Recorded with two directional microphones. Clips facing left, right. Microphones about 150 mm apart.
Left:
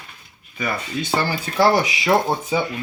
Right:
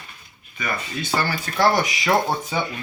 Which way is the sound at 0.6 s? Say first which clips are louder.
Left 3 dB; 30° left (ahead or behind).